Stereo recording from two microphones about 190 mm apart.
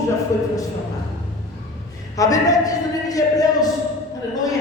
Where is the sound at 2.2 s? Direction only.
20° left (ahead or behind).